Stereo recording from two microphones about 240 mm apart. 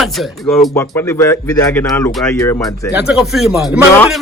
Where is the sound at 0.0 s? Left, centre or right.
Centre.